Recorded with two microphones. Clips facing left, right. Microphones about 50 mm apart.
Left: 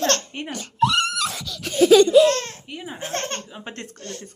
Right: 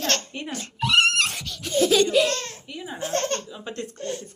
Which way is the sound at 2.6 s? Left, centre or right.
Left.